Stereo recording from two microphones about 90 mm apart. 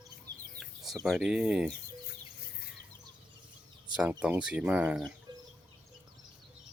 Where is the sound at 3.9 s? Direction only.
15° right (ahead or behind).